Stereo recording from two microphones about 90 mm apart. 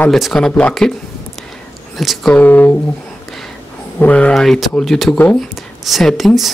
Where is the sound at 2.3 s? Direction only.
20° left (ahead or behind).